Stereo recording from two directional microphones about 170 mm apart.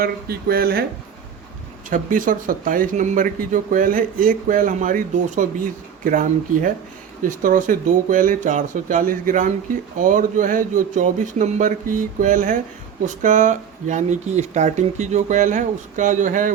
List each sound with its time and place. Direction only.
0.0 s speech: 65° right (ahead or behind)
1.9 s speech: 50° right (ahead or behind)